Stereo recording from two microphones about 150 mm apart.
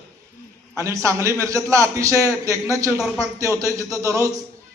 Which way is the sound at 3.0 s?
Centre (ahead or behind).